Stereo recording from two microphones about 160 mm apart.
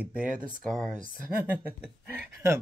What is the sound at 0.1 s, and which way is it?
Speech, 60° right (ahead or behind).